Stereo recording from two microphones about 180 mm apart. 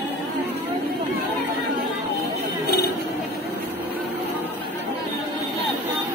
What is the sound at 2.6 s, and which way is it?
Chatter, 60° left (ahead or behind).